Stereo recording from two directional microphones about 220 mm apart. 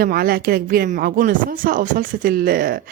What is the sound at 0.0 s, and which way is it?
Speech, 45° right (ahead or behind).